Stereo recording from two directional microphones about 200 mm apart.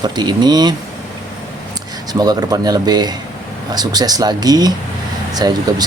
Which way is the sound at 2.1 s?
20° right (ahead or behind).